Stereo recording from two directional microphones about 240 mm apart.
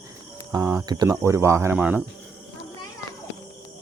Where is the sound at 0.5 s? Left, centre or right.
Centre.